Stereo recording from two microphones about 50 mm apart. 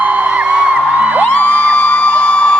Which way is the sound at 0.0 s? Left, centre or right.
Right.